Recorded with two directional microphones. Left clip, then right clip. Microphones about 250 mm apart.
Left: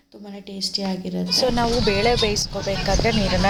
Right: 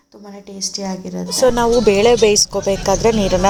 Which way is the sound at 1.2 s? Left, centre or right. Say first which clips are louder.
Right 6 dB; right.